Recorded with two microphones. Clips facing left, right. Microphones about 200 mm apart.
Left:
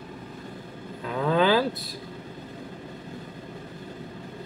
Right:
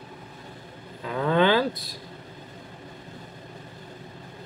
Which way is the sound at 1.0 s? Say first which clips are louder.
Right 1 dB; centre (ahead or behind).